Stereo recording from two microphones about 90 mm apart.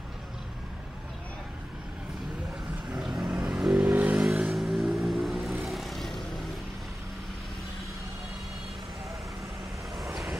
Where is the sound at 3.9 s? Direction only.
20° right (ahead or behind).